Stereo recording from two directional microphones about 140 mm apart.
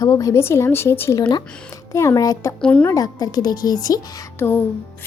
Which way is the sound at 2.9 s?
25° left (ahead or behind).